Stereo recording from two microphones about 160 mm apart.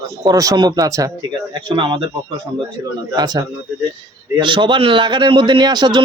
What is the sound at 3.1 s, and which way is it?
Speech, 25° right (ahead or behind).